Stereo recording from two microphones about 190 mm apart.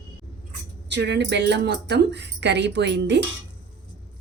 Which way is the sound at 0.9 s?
65° right (ahead or behind).